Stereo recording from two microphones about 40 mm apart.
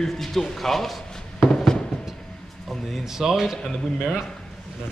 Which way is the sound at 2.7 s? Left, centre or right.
Centre.